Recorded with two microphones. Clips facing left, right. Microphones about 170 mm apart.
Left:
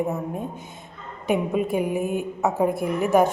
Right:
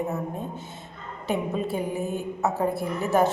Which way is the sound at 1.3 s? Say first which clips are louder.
Left 4 dB; 15° left (ahead or behind).